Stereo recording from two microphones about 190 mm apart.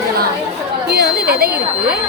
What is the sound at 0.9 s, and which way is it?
Speech, 55° right (ahead or behind).